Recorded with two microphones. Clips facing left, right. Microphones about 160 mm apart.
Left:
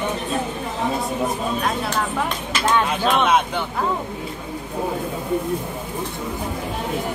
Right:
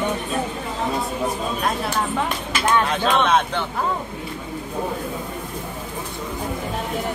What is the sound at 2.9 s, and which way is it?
Speech, 10° left (ahead or behind).